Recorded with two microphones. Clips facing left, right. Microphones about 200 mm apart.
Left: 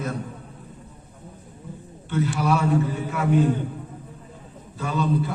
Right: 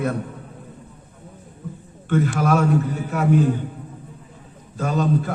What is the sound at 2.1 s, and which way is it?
Speech, 50° right (ahead or behind).